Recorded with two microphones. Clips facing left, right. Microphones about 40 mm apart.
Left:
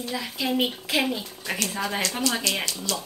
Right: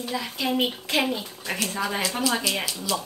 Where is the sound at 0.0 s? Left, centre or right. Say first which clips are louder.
Right 1 dB; centre.